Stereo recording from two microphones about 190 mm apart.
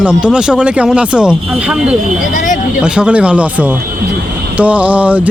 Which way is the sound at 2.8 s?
5° right (ahead or behind).